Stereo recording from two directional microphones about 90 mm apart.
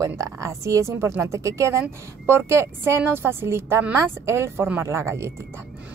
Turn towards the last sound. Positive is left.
turn(degrees=-30)  # may be behind; listen again after turning